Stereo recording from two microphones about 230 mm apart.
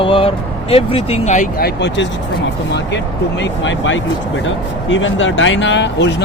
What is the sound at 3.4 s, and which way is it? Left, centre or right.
Speech, left.